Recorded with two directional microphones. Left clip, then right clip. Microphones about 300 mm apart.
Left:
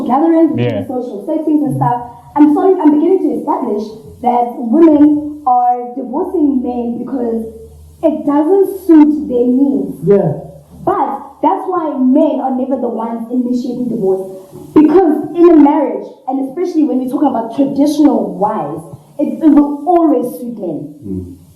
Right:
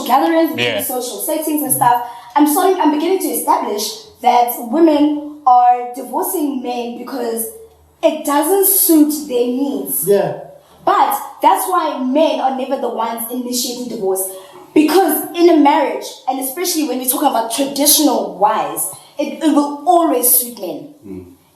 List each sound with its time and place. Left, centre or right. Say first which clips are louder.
0.0 s a woman's voice: left 2 dB; centre
9.5 s a woman's voice: left 6 dB; right
10.2 s a woman's voice: left 2 dB; centre
14.0 s a woman's voice: left 3 dB; centre
18.2 s a woman's voice: left 2 dB; centre
18.4 s a woman's voice: right 1 dB; centre
19.5 s a woman's voice: right 2 dB; centre
20.0 s a woman's voice: left 2 dB; centre